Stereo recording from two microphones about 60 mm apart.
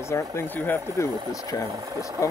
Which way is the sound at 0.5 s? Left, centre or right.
Left.